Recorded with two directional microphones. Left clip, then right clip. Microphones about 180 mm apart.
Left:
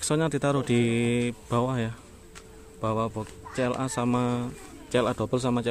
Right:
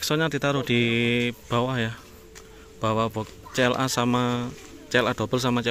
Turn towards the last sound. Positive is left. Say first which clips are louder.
# right 2 dB
turn(degrees=0)  # may be behind; listen again after turning